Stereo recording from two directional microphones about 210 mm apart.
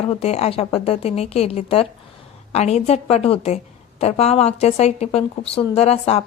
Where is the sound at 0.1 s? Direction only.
30° left (ahead or behind).